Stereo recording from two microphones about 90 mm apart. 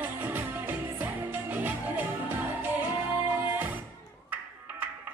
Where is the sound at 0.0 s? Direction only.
20° right (ahead or behind).